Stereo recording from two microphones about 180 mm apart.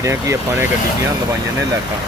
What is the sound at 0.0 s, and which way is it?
Speech, 15° right (ahead or behind).